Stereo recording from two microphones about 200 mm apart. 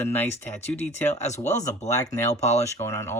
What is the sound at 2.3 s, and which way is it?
Speech, 35° left (ahead or behind).